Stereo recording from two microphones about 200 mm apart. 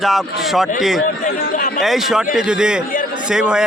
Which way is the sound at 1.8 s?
Centre (ahead or behind).